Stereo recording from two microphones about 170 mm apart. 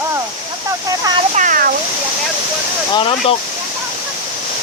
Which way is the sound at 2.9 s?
30° left (ahead or behind).